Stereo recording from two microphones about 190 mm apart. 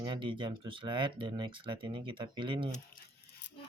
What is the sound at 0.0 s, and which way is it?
Speech, 25° right (ahead or behind).